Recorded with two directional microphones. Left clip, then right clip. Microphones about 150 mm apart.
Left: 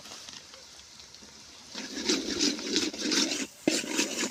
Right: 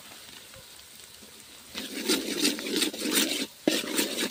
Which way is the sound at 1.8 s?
35° right (ahead or behind).